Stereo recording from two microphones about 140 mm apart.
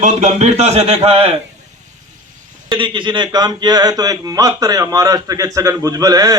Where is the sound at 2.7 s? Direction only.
35° right (ahead or behind).